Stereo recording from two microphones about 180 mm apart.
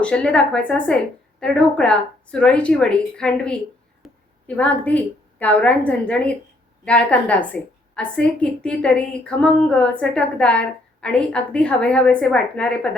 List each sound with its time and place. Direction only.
0.0 s a woman's voice: 5° left (ahead or behind)